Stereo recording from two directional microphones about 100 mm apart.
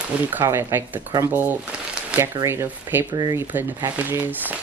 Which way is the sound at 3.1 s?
40° right (ahead or behind).